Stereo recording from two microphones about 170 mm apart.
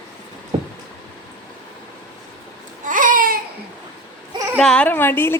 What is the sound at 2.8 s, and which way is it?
Babbling, 50° right (ahead or behind).